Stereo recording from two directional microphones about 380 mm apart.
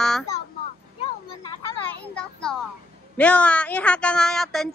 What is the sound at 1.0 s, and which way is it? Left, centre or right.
Children playing, centre.